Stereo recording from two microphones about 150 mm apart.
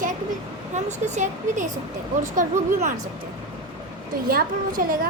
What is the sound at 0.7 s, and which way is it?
A woman's voice, 50° right (ahead or behind).